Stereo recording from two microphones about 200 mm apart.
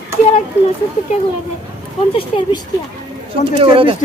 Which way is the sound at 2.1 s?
25° left (ahead or behind).